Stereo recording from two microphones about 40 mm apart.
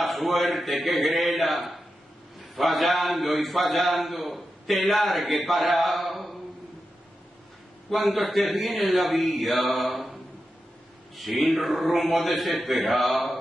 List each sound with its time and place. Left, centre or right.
0.0 s a man's voice: centre
7.9 s a man's voice: centre
11.1 s a man's voice: centre